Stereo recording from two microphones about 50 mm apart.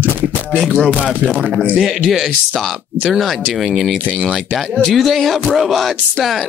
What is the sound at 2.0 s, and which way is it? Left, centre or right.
Speech, centre.